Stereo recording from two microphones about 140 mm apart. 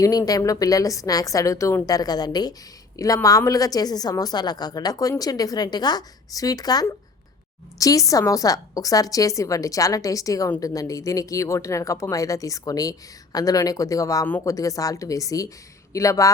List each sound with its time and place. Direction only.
0.0 s a woman's voice: 25° left (ahead or behind)
14.3 s speech: 15° left (ahead or behind)
14.5 s a woman's voice: 25° left (ahead or behind)